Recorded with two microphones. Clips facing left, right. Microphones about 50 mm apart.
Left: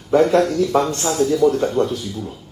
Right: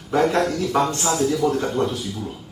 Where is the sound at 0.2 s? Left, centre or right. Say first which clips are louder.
Left 3 dB; right.